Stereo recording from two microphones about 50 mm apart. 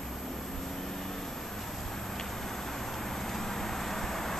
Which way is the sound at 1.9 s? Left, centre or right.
Centre.